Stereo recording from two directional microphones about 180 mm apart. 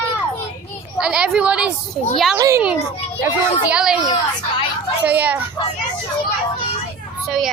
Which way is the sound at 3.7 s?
5° right (ahead or behind).